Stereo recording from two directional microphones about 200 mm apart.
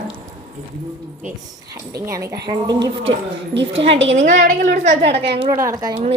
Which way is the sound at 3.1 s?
60° right (ahead or behind).